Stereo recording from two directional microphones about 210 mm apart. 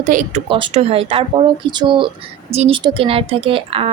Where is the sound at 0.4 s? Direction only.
25° right (ahead or behind).